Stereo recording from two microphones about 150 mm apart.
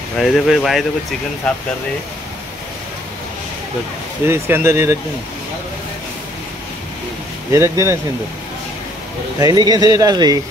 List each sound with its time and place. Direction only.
0.2 s speech: centre (ahead or behind)
4.3 s speech: 15° right (ahead or behind)
7.5 s speech: 20° right (ahead or behind)
9.4 s speech: 25° right (ahead or behind)